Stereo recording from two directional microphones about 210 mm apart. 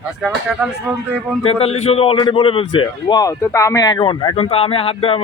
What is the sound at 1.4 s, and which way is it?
Speech, 30° left (ahead or behind).